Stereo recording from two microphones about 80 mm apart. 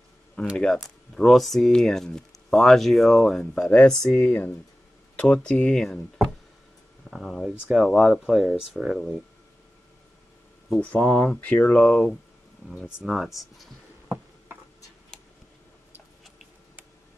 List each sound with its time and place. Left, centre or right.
0.6 s speech: centre
7.1 s speech: centre
10.8 s speech: centre
11.8 s speech: centre